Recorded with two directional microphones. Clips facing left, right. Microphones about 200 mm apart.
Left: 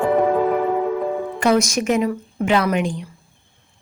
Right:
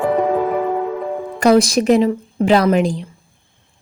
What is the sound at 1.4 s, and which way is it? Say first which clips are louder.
A woman's voice: right 6 dB; 35° right (ahead or behind).